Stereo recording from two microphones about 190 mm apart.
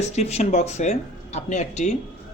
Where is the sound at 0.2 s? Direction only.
35° left (ahead or behind).